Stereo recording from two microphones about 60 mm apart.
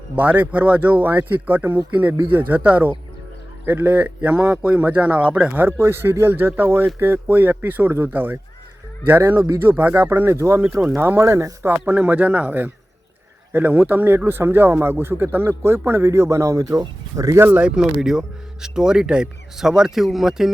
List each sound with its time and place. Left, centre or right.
0.2 s a man's voice: right
5.6 s speech: right
10.3 s speech: right
11.9 s a man's voice: right
17.3 s speech: right
17.6 s a man's voice: right
18.0 s speech: centre